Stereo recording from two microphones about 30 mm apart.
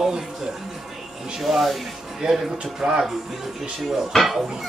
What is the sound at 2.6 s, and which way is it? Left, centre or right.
Speech, right.